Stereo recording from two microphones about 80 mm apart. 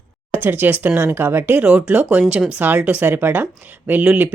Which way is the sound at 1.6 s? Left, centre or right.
Centre.